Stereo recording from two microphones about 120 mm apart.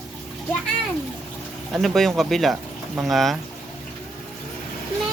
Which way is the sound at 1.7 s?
Centre (ahead or behind).